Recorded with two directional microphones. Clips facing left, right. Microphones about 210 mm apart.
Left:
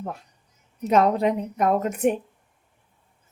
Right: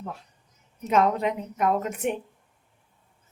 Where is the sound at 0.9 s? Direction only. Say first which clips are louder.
Left 3 dB; 35° left (ahead or behind).